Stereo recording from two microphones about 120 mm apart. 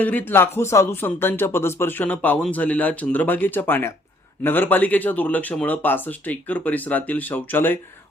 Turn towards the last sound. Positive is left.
turn(degrees=15)  # may be behind; listen again after turning